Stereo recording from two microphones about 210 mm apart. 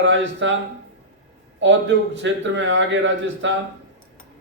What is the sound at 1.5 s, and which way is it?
A man's voice, 60° right (ahead or behind).